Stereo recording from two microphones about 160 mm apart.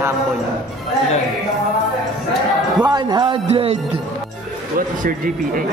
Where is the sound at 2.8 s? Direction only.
25° right (ahead or behind).